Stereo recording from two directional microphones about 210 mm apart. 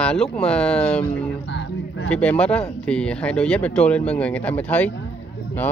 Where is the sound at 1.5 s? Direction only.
60° left (ahead or behind).